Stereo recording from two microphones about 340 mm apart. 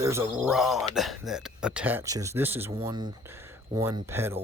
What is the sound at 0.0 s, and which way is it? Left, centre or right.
Speech, centre.